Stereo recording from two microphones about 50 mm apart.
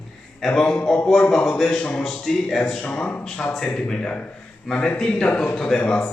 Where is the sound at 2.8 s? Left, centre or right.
Left.